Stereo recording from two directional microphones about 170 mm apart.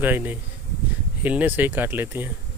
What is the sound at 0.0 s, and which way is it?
Speech, 10° right (ahead or behind).